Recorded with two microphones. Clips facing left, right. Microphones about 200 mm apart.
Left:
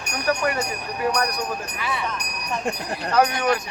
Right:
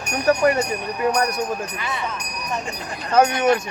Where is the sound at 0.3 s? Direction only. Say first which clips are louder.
Right 6 dB; 30° right (ahead or behind).